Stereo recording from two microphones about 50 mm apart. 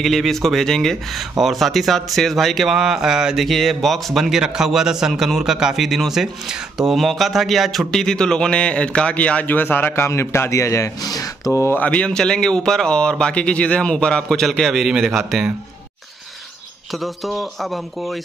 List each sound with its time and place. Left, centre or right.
0.0 s speech: centre
3.4 s speech: centre
7.9 s a man's voice: centre
9.5 s a man's voice: left
10.0 s speech: left
11.7 s a man's voice: left
12.1 s speech: centre
14.4 s speech: centre
16.9 s speech: centre